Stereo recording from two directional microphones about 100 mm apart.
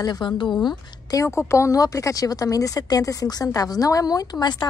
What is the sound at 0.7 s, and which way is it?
A woman's voice, 35° left (ahead or behind).